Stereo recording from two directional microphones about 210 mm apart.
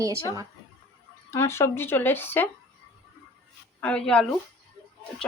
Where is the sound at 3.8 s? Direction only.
5° left (ahead or behind).